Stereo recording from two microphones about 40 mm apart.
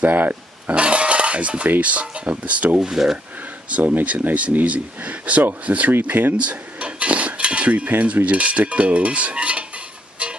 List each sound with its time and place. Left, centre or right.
0.0 s speech: right
0.7 s cutlery: right
2.8 s speech: centre
4.0 s cutlery: right
6.0 s speech: right
6.5 s cutlery: right